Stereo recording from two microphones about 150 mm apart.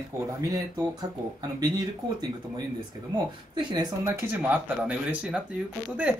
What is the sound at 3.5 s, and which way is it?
Speech, 30° right (ahead or behind).